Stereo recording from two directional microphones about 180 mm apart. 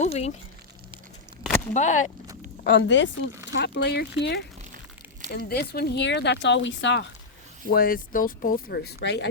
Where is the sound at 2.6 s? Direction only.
85° left.